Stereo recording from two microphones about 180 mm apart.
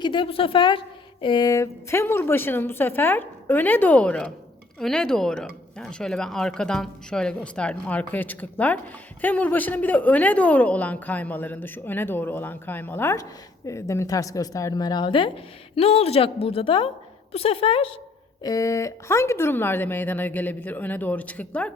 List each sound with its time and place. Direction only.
0.0 s a woman's voice: 25° left (ahead or behind)
18.4 s a woman's voice: 20° left (ahead or behind)